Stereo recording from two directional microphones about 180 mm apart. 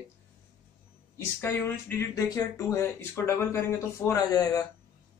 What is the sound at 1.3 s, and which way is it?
Speech, 15° left (ahead or behind).